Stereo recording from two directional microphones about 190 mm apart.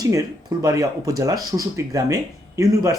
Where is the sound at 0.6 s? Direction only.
20° right (ahead or behind).